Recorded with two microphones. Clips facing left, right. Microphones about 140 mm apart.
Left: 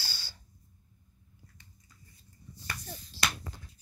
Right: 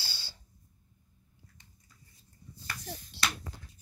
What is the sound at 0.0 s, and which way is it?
Snort, 25° right (ahead or behind).